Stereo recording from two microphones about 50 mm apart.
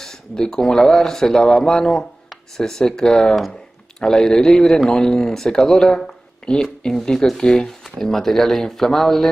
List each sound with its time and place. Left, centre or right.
0.0 s speech: centre